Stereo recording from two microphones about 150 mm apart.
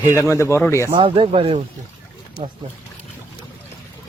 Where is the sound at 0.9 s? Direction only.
35° right (ahead or behind).